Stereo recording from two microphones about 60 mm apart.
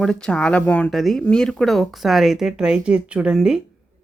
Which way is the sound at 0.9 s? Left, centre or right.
Centre.